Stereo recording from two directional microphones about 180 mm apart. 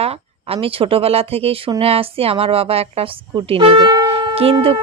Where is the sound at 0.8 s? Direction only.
30° right (ahead or behind).